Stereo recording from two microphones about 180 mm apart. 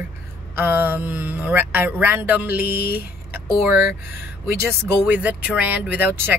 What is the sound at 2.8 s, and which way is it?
Speech, 60° left (ahead or behind).